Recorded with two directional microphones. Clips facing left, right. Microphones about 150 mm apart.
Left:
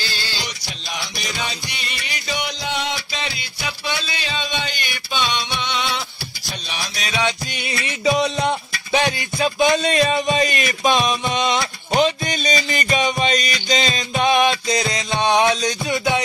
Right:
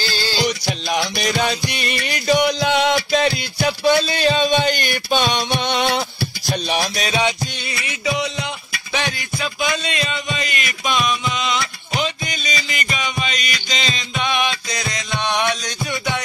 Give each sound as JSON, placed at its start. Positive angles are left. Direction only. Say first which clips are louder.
{"t": 0.9, "sound": "music", "louder": "right 8 dB", "side_deg": -60}
{"t": 2.6, "sound": "music", "louder": "right 8 dB", "side_deg": -70}
{"t": 3.1, "sound": "music", "louder": "right 12 dB", "side_deg": -50}
{"t": 7.1, "sound": "music", "louder": "even", "side_deg": -25}
{"t": 7.6, "sound": "music", "louder": "left 5 dB", "side_deg": 25}
{"t": 8.2, "sound": "music", "louder": "left 5 dB", "side_deg": 40}
{"t": 8.9, "sound": "music", "louder": "left 5 dB", "side_deg": 25}
{"t": 9.7, "sound": "music", "louder": "left 6 dB", "side_deg": 45}
{"t": 14.5, "sound": "music", "louder": "left 6 dB", "side_deg": 25}